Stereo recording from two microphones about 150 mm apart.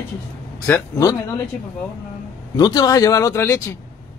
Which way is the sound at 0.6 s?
15° left (ahead or behind).